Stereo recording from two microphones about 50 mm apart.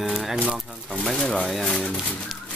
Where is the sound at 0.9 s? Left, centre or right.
Centre.